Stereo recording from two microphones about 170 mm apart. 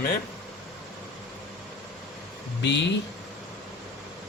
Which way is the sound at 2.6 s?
90° left.